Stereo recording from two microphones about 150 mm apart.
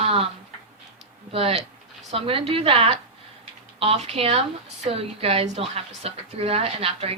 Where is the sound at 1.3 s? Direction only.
40° right (ahead or behind).